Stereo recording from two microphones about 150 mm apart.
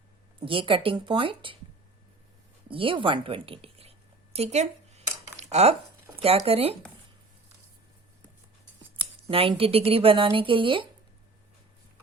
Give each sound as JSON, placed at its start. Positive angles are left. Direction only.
{"t": 0.3, "sound": "speech", "side_deg": -35}
{"t": 2.6, "sound": "a sound", "side_deg": -35}
{"t": 6.1, "sound": "speech", "side_deg": -40}
{"t": 9.0, "sound": "speech", "side_deg": -40}